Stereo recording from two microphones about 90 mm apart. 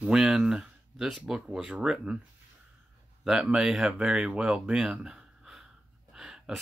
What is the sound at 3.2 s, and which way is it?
Speech, 5° right (ahead or behind).